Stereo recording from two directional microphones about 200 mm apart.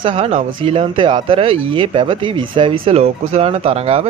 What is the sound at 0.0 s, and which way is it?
Speech, 30° right (ahead or behind).